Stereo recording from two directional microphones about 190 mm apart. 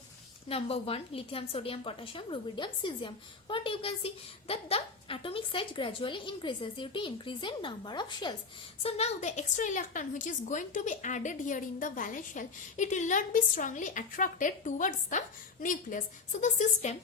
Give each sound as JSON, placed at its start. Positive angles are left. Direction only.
{"t": 0.4, "sound": "a woman's voice", "side_deg": 30}